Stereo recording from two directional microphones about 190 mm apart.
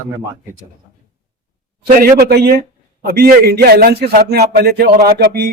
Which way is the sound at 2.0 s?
50° right (ahead or behind).